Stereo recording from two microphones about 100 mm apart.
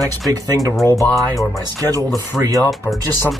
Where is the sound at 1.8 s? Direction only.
35° right (ahead or behind).